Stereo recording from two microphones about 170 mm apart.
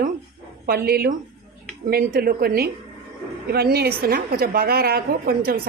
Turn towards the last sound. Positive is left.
turn(degrees=-65)  # may be behind; listen again after turning